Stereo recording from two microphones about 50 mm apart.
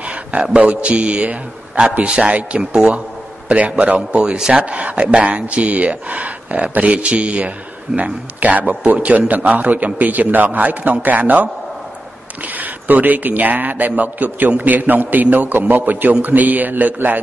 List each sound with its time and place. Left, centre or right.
0.0 s speech: right
3.4 s a man's voice: right
4.4 s speech: centre
4.6 s a man's voice: right